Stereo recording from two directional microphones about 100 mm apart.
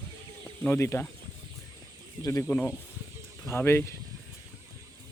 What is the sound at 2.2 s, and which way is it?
Speech, 35° left (ahead or behind).